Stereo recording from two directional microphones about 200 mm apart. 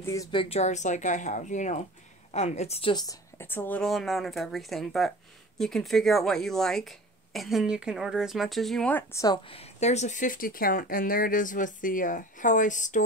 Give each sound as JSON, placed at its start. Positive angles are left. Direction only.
{"t": 0.0, "sound": "a woman's voice", "side_deg": 15}